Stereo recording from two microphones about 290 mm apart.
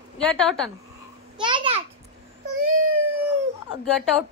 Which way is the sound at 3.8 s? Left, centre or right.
Centre.